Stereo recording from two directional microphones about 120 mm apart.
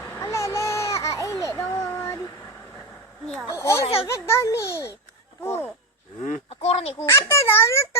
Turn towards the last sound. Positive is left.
turn(degrees=20)  # may be behind; listen again after turning